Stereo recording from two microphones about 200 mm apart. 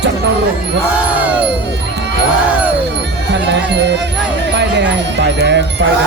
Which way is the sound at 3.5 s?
60° right (ahead or behind).